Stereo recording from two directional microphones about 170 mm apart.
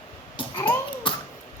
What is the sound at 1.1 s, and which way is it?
Tick-tock, 30° left (ahead or behind).